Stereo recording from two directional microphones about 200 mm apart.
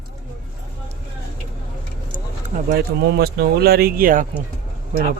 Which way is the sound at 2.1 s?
40° right (ahead or behind).